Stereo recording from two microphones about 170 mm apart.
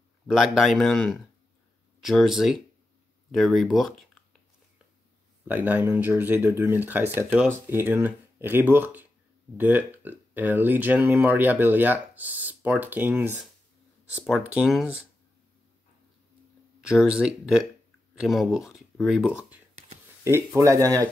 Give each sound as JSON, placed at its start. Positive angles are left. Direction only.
{"t": 0.3, "sound": "speech", "side_deg": 0}
{"t": 5.5, "sound": "speech", "side_deg": -10}
{"t": 16.9, "sound": "speech", "side_deg": -5}
{"t": 20.2, "sound": "speech", "side_deg": -15}